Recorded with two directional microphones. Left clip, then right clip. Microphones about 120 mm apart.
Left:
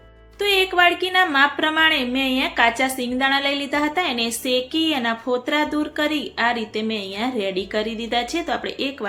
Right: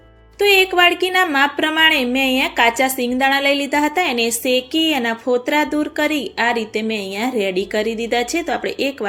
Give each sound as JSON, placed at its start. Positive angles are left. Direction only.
{"t": 0.3, "sound": "speech", "side_deg": -35}